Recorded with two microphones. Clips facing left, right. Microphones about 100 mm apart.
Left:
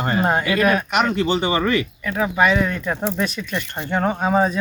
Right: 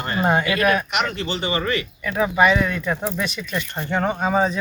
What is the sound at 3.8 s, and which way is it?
Speech, centre (ahead or behind).